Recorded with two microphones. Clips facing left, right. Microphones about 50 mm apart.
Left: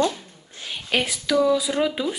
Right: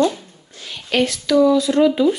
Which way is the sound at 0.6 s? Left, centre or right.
Centre.